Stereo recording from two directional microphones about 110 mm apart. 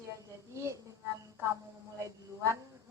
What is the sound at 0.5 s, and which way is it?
Speech, 30° right (ahead or behind).